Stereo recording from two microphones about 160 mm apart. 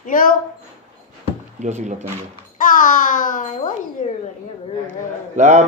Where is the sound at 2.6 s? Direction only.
55° left (ahead or behind).